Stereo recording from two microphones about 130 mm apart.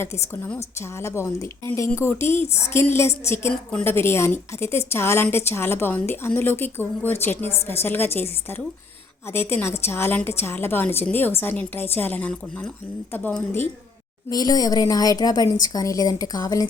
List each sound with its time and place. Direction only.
0.0 s a woman's voice: 20° left (ahead or behind)
14.3 s a woman's voice: 30° left (ahead or behind)